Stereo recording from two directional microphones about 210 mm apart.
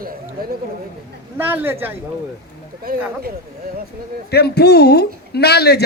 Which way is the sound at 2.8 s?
45° right (ahead or behind).